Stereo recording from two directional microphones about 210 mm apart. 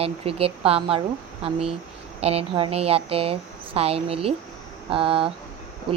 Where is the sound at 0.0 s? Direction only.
30° right (ahead or behind).